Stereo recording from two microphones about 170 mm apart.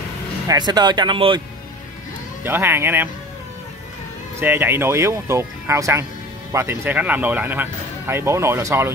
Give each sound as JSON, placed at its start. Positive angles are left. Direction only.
{"t": 0.5, "sound": "speech", "side_deg": -25}
{"t": 2.4, "sound": "speech", "side_deg": -15}
{"t": 4.4, "sound": "speech", "side_deg": -10}